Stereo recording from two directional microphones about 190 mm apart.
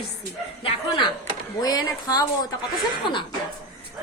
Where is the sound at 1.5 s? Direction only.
20° left (ahead or behind).